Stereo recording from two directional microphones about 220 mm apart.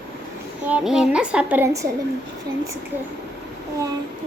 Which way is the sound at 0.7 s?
5° right (ahead or behind).